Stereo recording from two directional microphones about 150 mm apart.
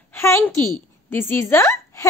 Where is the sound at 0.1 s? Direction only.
15° left (ahead or behind).